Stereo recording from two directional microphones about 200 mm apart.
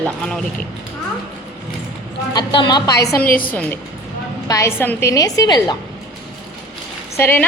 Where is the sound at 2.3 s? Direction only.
20° left (ahead or behind).